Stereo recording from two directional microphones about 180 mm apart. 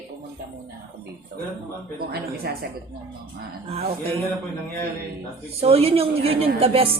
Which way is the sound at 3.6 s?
35° right (ahead or behind).